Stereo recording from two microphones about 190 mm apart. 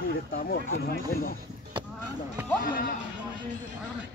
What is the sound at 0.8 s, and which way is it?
Speech, 50° left (ahead or behind).